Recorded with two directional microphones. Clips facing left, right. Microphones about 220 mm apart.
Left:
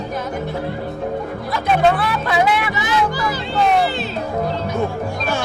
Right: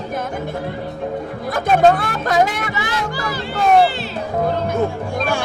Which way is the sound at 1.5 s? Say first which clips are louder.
Right 3 dB; 45° right (ahead or behind).